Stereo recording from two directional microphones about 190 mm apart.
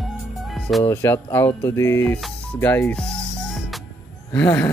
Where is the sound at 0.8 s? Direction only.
15° left (ahead or behind).